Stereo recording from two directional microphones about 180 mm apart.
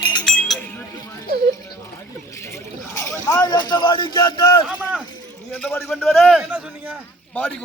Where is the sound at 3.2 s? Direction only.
20° left (ahead or behind).